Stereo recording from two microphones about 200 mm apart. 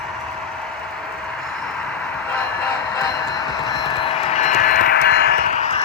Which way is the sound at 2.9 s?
20° left (ahead or behind).